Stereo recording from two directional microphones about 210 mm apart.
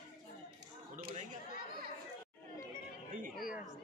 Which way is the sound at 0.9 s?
35° right (ahead or behind).